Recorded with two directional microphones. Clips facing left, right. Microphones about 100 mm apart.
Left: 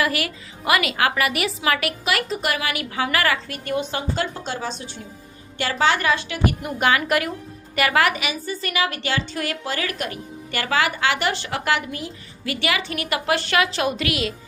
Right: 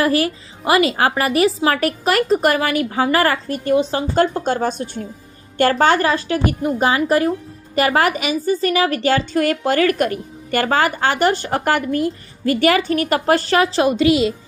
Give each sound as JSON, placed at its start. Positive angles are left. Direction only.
{"t": 0.0, "sound": "speech", "side_deg": -35}
{"t": 4.1, "sound": "a woman's voice", "side_deg": -45}